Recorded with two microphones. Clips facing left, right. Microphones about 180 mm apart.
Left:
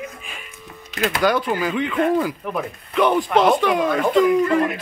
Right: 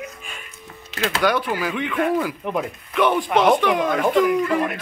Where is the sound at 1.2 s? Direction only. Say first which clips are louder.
Left 1 dB; centre (ahead or behind).